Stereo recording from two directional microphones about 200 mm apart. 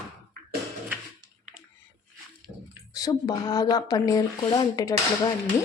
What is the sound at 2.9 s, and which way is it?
Speech, 20° left (ahead or behind).